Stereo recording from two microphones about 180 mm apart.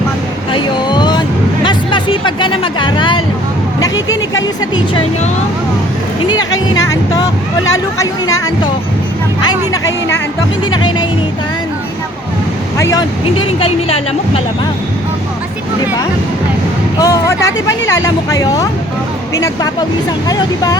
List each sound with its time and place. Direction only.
0.5 s a sound: 25° left (ahead or behind)
3.8 s vehicle: 20° left (ahead or behind)
6.3 s speech: 20° left (ahead or behind)
12.7 s speech: 15° left (ahead or behind)
13.6 s speech: 30° left (ahead or behind)
17.0 s speech: 15° left (ahead or behind)